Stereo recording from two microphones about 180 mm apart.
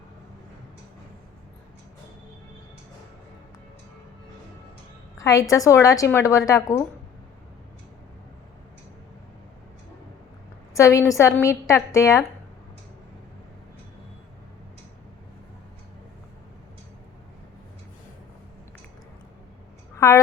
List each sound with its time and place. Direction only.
5.1 s a woman's voice: 15° left (ahead or behind)
10.8 s a woman's voice: 15° left (ahead or behind)
20.0 s a sound: 15° left (ahead or behind)